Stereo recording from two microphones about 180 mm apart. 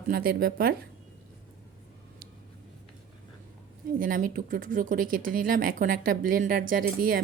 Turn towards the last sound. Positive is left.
turn(degrees=-50)  # may be behind; listen again after turning